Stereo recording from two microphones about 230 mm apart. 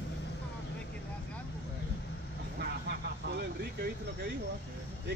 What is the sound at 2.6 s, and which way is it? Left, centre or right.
Vehicle, right.